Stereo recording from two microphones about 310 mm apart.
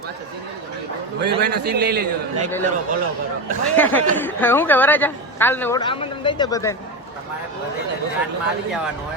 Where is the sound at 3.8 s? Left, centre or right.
Centre.